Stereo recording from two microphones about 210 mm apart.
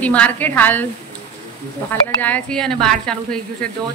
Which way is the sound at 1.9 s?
10° left (ahead or behind).